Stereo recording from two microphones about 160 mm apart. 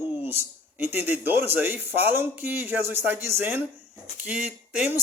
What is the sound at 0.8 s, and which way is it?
Speech, 10° right (ahead or behind).